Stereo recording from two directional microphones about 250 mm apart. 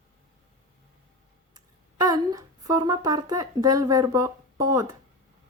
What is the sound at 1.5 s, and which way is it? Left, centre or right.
A woman's voice, centre.